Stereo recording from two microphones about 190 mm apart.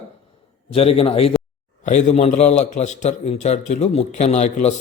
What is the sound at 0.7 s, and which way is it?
A man's voice, 30° left (ahead or behind).